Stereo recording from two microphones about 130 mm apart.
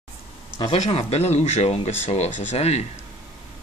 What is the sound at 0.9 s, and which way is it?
Speech, 55° left (ahead or behind).